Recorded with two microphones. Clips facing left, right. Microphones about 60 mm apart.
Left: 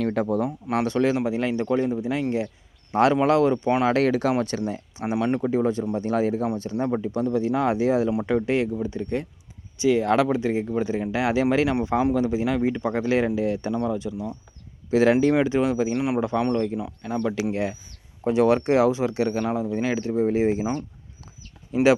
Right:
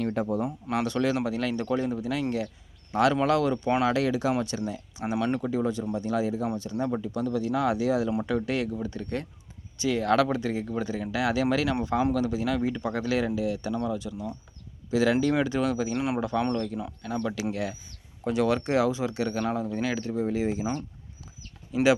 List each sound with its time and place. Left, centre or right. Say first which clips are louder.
0.0 s speech: left 4 dB; left
0.8 s speech: left 4 dB; left
3.8 s speech: left 4 dB; left
4.6 s speech: left 4 dB; left
5.1 s speech: left 4 dB; centre
5.5 s speech: left 5 dB; left
14.1 s speech: left 4 dB; centre
14.8 s speech: left 5 dB; left
15.3 s speech: left 5 dB; left
16.0 s a man's voice: left 4 dB; centre
17.5 s speech: left 5 dB; left
19.5 s speech: left 4 dB; centre; by 21.9 s left